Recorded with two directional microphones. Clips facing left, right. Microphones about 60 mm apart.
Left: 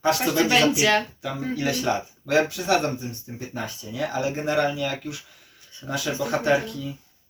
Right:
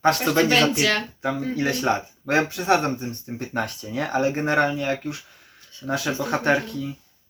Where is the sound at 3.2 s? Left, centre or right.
Right.